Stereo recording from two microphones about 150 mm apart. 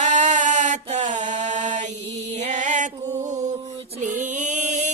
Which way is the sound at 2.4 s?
50° right (ahead or behind).